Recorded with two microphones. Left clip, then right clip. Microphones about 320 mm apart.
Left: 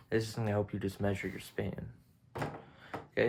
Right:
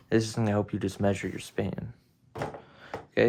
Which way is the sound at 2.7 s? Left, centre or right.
Right.